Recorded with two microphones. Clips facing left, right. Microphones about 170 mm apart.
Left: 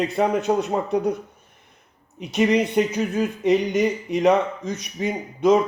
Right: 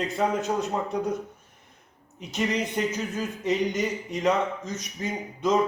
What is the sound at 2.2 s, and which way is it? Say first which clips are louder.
Speech: left 8 dB; 65° left (ahead or behind).